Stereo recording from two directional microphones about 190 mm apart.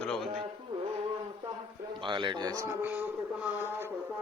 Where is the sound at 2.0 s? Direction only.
25° right (ahead or behind); by 3.9 s 10° right (ahead or behind).